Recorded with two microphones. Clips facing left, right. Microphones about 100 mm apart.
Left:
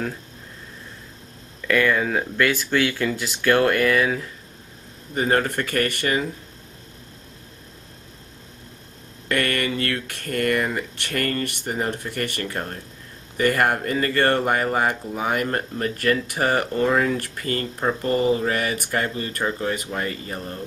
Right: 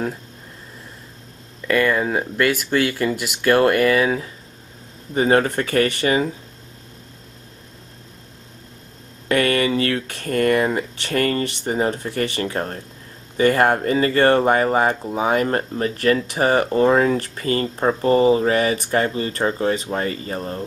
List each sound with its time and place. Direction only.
1.7 s speech: 15° right (ahead or behind)
9.3 s speech: 15° right (ahead or behind)